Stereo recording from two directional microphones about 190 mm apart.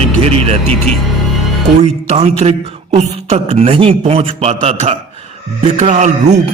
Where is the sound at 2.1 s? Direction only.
35° right (ahead or behind).